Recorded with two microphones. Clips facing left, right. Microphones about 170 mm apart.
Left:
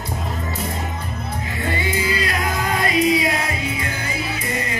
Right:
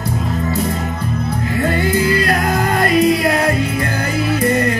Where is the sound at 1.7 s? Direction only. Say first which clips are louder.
Right 6 dB; 60° right (ahead or behind).